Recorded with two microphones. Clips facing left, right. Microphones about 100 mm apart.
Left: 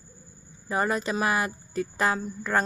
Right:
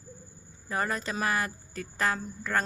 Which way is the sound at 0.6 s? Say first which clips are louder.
Left 5 dB; 15° left (ahead or behind).